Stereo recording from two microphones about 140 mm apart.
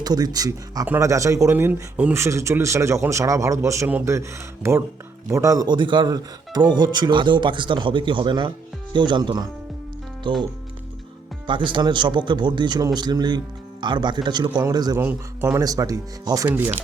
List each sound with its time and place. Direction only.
0.0 s speech: 30° right (ahead or behind)
11.4 s speech: 35° right (ahead or behind)
14.9 s speech: 15° right (ahead or behind)
16.5 s speech: 15° right (ahead or behind)